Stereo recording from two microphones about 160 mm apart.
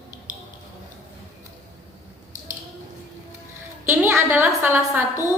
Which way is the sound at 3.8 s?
15° right (ahead or behind).